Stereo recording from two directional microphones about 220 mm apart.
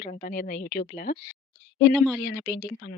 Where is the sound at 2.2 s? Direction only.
50° left (ahead or behind).